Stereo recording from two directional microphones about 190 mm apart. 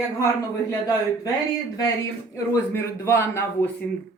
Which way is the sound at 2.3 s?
15° left (ahead or behind).